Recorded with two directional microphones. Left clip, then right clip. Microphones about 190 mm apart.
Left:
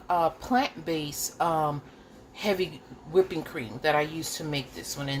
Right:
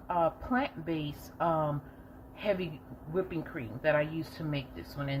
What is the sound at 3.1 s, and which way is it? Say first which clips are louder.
A woman's voice: left 9 dB; 30° left (ahead or behind).